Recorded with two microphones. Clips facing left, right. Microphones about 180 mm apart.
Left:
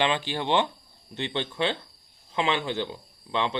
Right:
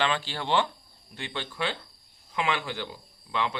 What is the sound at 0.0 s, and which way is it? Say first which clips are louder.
Speech: left 3 dB; 20° left (ahead or behind).